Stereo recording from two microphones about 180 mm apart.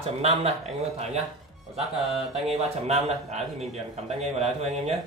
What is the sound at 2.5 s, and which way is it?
Speech, 35° right (ahead or behind).